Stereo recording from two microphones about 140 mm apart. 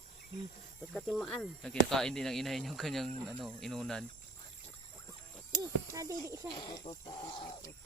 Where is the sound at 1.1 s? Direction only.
Centre (ahead or behind).